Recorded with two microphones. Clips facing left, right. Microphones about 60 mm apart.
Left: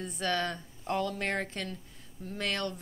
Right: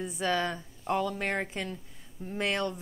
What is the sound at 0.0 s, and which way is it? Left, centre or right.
A woman's voice, centre.